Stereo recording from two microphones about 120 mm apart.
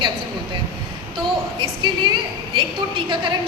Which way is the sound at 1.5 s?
40° right (ahead or behind).